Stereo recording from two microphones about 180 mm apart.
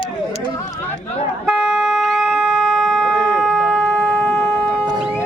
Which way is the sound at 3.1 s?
20° right (ahead or behind).